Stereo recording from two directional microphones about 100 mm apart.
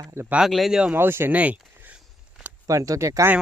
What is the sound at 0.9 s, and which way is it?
Speech, 20° right (ahead or behind).